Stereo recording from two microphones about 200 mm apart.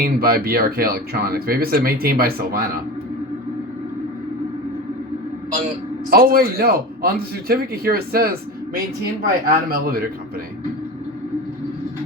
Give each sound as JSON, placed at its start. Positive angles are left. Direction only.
{"t": 0.0, "sound": "speech", "side_deg": -50}
{"t": 6.1, "sound": "speech", "side_deg": -50}
{"t": 9.5, "sound": "speech", "side_deg": -50}